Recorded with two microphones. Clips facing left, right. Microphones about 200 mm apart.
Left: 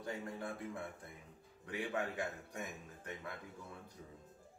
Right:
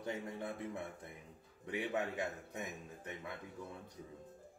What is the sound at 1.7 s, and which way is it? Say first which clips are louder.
A man's voice: right 2 dB; 20° right (ahead or behind).